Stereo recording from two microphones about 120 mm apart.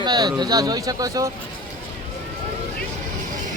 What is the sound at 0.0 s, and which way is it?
Speech, 35° right (ahead or behind).